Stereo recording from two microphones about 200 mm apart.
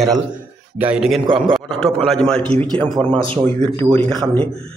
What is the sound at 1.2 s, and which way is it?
Speech, 25° right (ahead or behind).